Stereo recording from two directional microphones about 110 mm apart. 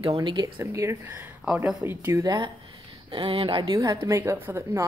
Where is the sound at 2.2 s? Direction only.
40° right (ahead or behind).